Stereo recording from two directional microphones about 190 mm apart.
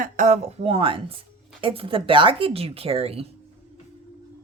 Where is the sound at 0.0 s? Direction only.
40° right (ahead or behind).